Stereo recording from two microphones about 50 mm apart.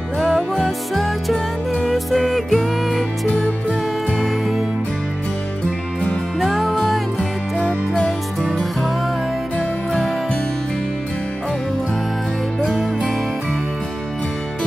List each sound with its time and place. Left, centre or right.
0.2 s music: centre
4.2 s music: centre
6.4 s music: centre
7.5 s music: left